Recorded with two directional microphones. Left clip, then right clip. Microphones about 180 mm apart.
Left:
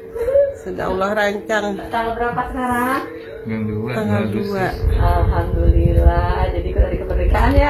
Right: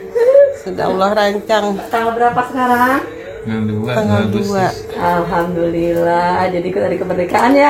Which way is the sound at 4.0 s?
10° right (ahead or behind).